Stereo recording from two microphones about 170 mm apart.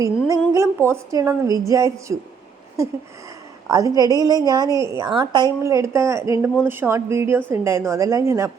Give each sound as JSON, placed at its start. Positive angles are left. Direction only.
{"t": 0.0, "sound": "speech", "side_deg": -20}
{"t": 3.7, "sound": "a woman's voice", "side_deg": -20}